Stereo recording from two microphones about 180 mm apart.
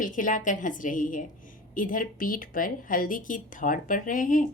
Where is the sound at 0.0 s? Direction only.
50° left (ahead or behind).